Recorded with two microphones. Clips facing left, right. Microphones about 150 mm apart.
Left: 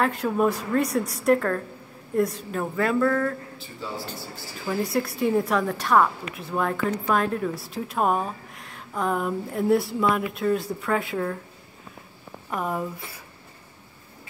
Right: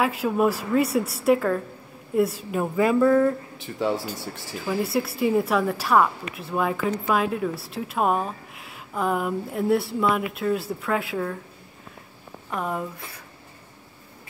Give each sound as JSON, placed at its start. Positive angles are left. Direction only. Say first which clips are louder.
{"t": 0.0, "sound": "a woman's voice", "louder": "right 1 dB", "side_deg": -5}
{"t": 3.6, "sound": "speech", "louder": "right 12 dB", "side_deg": -90}
{"t": 4.6, "sound": "a woman's voice", "louder": "right 1 dB", "side_deg": -5}
{"t": 12.4, "sound": "a woman's voice", "louder": "even", "side_deg": 0}